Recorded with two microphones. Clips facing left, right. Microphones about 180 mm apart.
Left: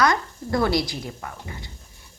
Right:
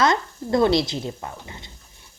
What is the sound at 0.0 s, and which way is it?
A woman's voice, 25° right (ahead or behind).